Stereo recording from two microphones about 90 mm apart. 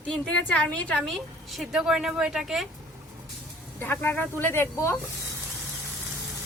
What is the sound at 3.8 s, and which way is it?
Speech, 20° left (ahead or behind).